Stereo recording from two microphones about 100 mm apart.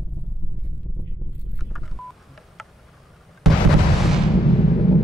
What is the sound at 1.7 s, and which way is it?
Telephone dialing, centre (ahead or behind).